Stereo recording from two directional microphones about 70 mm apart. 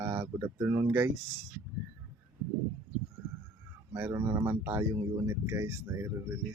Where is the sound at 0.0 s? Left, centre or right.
Right.